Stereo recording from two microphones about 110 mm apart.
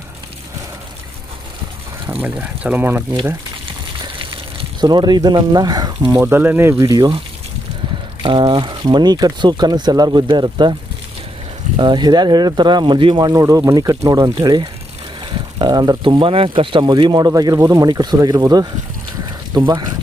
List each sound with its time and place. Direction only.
2.2 s speech: 15° right (ahead or behind)
4.0 s gush: 50° right (ahead or behind)
4.8 s speech: 40° right (ahead or behind)
6.1 s speech: 15° right (ahead or behind)
6.8 s speech: 35° right (ahead or behind)
8.2 s speech: 45° right (ahead or behind)
11.8 s speech: 45° right (ahead or behind)